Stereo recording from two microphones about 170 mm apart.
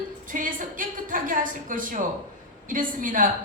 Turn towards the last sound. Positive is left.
turn(degrees=-50)  # may be behind; listen again after turning